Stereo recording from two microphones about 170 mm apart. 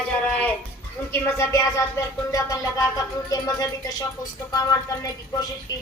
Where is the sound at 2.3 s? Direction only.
20° left (ahead or behind).